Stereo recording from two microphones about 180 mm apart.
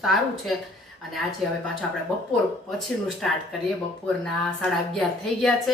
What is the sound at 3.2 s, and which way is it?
Speech, 5° left (ahead or behind).